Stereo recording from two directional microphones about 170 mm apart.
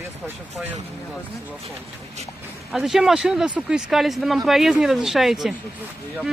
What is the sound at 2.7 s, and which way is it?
Speech, centre (ahead or behind).